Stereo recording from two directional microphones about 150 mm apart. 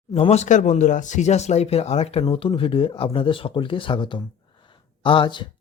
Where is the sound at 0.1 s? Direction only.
45° left (ahead or behind).